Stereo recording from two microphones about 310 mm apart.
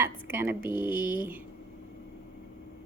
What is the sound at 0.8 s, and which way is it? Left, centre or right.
Speech, centre.